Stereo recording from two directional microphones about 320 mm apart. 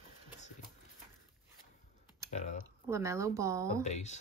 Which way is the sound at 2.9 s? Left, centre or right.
Centre.